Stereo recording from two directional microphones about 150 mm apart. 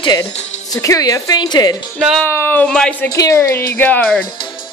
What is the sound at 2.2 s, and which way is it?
Speech, 15° left (ahead or behind).